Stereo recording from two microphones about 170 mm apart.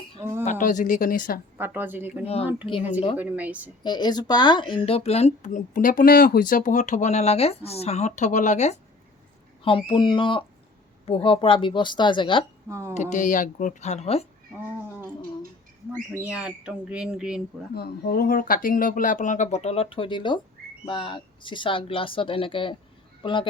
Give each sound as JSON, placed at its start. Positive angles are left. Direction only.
{"t": 0.2, "sound": "speech", "side_deg": -25}
{"t": 0.6, "sound": "speech", "side_deg": 50}
{"t": 1.5, "sound": "a woman's voice", "side_deg": -10}
{"t": 2.2, "sound": "speech", "side_deg": 35}
{"t": 3.2, "sound": "a woman's voice", "side_deg": -10}
{"t": 3.8, "sound": "speech", "side_deg": 25}
{"t": 9.6, "sound": "speech", "side_deg": 30}
{"t": 12.6, "sound": "speech", "side_deg": -15}
{"t": 12.9, "sound": "speech", "side_deg": 45}
{"t": 14.6, "sound": "cat", "side_deg": -10}
{"t": 16.2, "sound": "speech", "side_deg": -5}
{"t": 17.7, "sound": "speech", "side_deg": 65}